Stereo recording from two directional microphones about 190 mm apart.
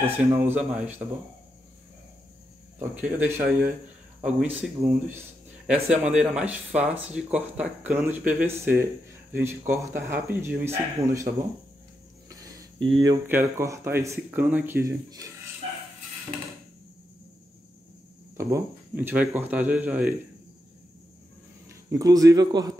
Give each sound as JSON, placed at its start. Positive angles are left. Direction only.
{"t": 0.0, "sound": "speech", "side_deg": -10}
{"t": 3.0, "sound": "speech", "side_deg": -5}
{"t": 12.3, "sound": "a sound", "side_deg": -20}
{"t": 12.8, "sound": "speech", "side_deg": -25}
{"t": 13.3, "sound": "speech", "side_deg": -10}
{"t": 18.4, "sound": "speech", "side_deg": -15}
{"t": 21.6, "sound": "speech", "side_deg": -20}